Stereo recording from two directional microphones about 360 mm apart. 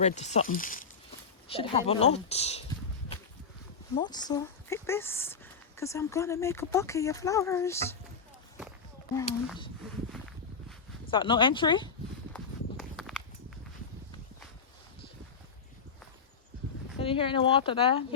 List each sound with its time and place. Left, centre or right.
0.0 s speech: centre
3.9 s speech: centre
11.0 s speech: centre
12.3 s walk: centre
17.0 s speech: centre